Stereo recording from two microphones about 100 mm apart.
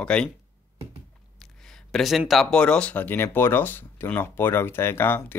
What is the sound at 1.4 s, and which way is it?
Speech, 5° left (ahead or behind).